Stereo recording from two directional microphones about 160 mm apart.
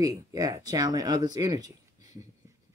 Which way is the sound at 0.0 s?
20° right (ahead or behind).